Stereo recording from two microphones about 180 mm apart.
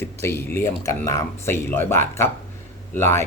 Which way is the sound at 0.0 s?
15° left (ahead or behind).